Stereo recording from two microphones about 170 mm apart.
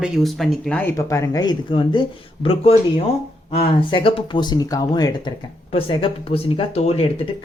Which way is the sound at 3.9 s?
35° left (ahead or behind).